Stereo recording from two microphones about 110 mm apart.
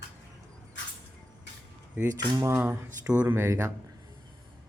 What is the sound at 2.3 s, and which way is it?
Speech, 25° right (ahead or behind).